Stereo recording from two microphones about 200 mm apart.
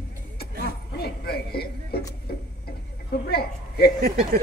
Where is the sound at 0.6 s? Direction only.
50° left (ahead or behind).